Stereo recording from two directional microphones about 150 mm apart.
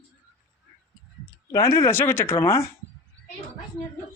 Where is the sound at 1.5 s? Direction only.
20° left (ahead or behind).